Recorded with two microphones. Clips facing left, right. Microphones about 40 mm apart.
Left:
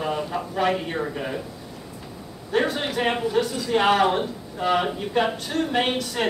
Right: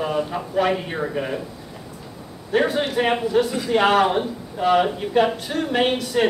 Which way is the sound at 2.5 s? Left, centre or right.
Centre.